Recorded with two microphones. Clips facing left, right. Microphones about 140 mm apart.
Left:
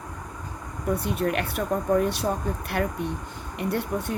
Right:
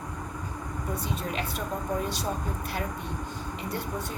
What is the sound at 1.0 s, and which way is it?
Speech, 65° left (ahead or behind).